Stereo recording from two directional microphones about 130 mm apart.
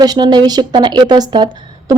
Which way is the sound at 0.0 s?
30° right (ahead or behind).